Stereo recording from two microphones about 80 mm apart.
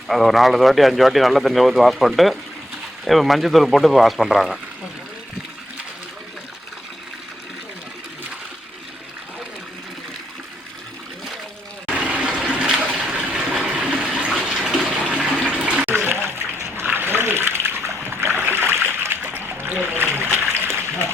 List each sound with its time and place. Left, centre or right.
0.1 s speech: centre
11.9 s water: centre
14.3 s bathtub: centre
15.4 s water: centre
15.9 s water: right